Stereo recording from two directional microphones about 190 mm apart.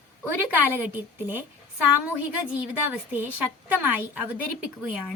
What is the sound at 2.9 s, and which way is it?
A woman's voice, 10° right (ahead or behind).